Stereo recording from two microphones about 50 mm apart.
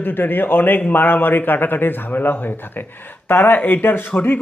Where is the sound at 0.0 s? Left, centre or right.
Left.